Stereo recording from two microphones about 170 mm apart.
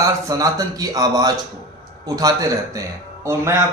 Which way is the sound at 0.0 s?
20° right (ahead or behind).